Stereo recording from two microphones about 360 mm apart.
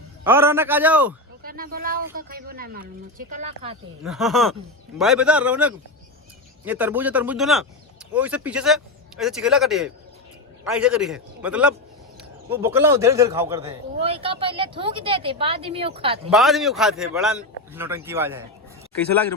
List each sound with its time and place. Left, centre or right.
0.3 s speech: centre
1.4 s speech: right
4.0 s a man's voice: centre
16.3 s a man's voice: centre